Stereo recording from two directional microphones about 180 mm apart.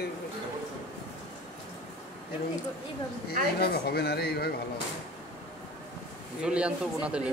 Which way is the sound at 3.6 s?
60° left (ahead or behind).